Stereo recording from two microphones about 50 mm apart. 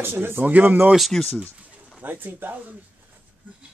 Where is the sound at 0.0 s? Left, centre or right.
Right.